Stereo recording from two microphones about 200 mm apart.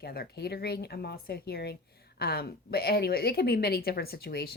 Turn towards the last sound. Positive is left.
turn(degrees=50)  # may be behind; listen again after turning